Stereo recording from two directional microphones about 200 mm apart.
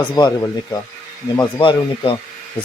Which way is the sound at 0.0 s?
20° left (ahead or behind).